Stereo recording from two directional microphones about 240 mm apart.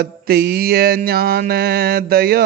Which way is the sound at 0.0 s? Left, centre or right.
Right.